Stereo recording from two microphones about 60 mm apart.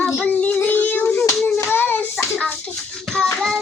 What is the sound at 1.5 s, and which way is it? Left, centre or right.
Hands, left.